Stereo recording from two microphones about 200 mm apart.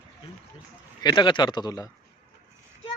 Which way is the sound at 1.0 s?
20° left (ahead or behind).